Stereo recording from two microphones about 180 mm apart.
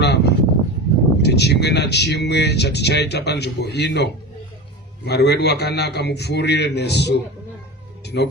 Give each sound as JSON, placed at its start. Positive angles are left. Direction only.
{"t": 0.0, "sound": "a sound", "side_deg": 65}
{"t": 1.2, "sound": "speech", "side_deg": 65}
{"t": 8.0, "sound": "cat", "side_deg": 65}